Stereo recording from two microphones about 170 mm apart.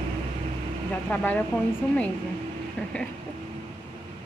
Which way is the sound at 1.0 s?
10° left (ahead or behind).